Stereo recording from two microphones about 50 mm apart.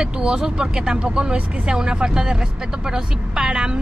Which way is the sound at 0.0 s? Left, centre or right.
Centre.